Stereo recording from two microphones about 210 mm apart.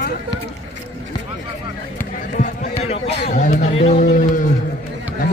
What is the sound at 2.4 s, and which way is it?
A man's voice, 30° left (ahead or behind).